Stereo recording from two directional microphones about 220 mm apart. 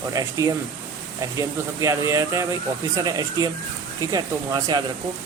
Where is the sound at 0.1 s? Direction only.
15° right (ahead or behind).